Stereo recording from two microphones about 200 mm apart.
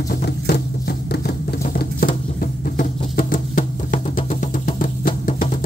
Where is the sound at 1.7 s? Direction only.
45° left (ahead or behind).